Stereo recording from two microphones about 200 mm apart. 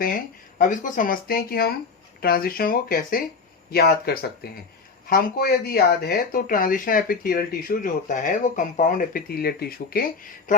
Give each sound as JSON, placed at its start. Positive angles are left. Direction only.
{"t": 0.6, "sound": "speech", "side_deg": 40}